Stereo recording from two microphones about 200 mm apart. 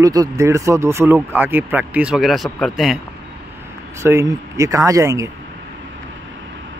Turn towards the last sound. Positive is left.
turn(degrees=-15)  # may be behind; listen again after turning